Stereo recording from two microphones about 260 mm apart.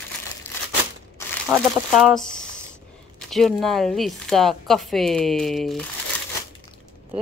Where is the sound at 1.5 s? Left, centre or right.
Centre.